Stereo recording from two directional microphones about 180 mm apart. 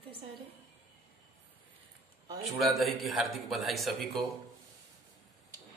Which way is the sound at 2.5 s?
Centre (ahead or behind).